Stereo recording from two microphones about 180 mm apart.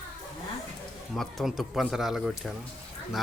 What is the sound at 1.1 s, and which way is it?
A man's voice, centre (ahead or behind).